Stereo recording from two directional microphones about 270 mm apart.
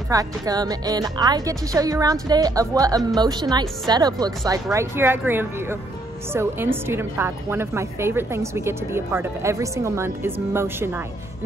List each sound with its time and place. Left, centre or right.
0.1 s a woman's voice: centre